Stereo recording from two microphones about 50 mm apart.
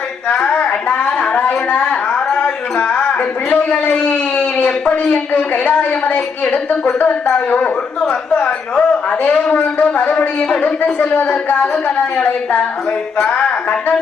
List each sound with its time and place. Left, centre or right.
0.4 s a sound: left
4.9 s a woman's voice: left
6.5 s a woman's voice: left
7.3 s a man's voice: left